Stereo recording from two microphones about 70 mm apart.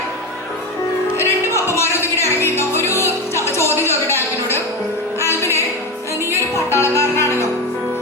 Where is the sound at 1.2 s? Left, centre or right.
Left.